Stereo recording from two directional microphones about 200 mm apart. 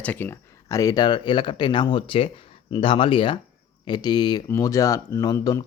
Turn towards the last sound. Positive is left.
turn(degrees=15)  # may be behind; listen again after turning